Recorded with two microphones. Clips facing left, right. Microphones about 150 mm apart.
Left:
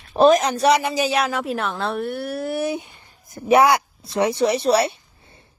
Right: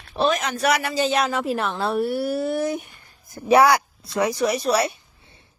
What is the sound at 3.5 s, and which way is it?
A woman's voice, 20° left (ahead or behind).